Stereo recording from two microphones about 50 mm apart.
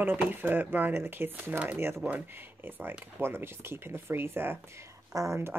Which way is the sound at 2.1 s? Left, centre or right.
Right.